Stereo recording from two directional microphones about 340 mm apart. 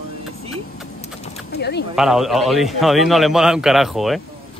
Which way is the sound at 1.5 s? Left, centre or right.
Left.